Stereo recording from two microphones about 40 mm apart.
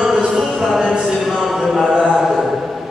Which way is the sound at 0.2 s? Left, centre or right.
Centre.